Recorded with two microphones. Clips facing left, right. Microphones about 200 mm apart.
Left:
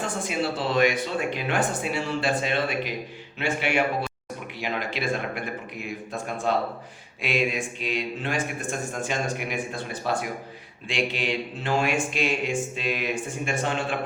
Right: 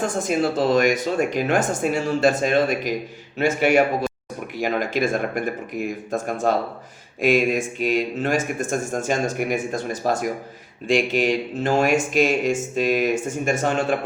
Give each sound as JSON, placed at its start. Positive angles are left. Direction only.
{"t": 0.0, "sound": "speech", "side_deg": -45}